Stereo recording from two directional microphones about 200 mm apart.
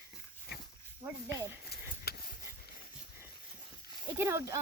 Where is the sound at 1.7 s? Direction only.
50° left (ahead or behind).